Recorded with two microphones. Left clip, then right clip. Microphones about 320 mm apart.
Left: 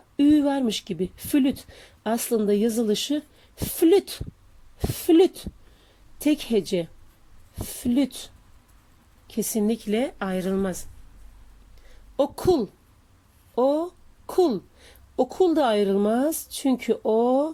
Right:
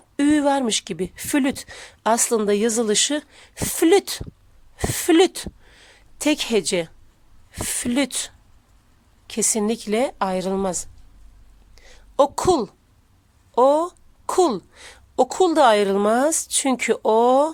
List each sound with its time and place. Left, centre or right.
0.2 s speech: right
9.6 s a woman's voice: centre
11.9 s a sound: right
14.3 s speech: right